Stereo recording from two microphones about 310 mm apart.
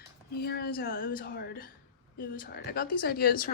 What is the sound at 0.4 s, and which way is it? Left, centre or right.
Speech, left.